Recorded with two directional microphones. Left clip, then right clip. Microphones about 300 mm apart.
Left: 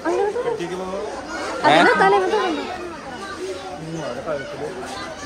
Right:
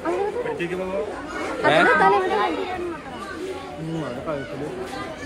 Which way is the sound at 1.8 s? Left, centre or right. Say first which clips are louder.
Even; left.